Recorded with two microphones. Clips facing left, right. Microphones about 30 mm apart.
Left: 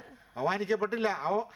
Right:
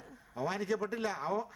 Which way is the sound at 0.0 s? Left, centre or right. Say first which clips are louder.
Left 5 dB; left.